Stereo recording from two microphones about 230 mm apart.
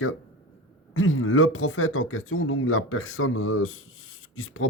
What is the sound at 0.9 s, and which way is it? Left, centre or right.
Speech, left.